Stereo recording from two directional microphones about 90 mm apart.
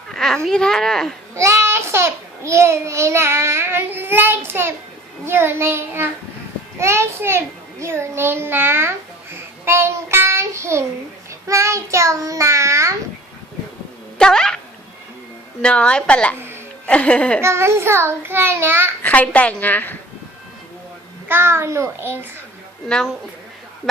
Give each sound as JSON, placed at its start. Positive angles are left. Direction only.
{"t": 0.1, "sound": "a sound", "side_deg": 5}
{"t": 0.4, "sound": "speech", "side_deg": 5}
{"t": 1.4, "sound": "child singing", "side_deg": -30}
{"t": 5.2, "sound": "a child's voice", "side_deg": -30}
{"t": 11.4, "sound": "child singing", "side_deg": -35}
{"t": 14.2, "sound": "speech", "side_deg": 5}
{"t": 15.6, "sound": "a woman's voice", "side_deg": 10}
{"t": 17.4, "sound": "a child's voice", "side_deg": -30}
{"t": 19.0, "sound": "a woman's voice", "side_deg": 15}
{"t": 21.2, "sound": "a child's voice", "side_deg": -25}
{"t": 23.9, "sound": "speech", "side_deg": 0}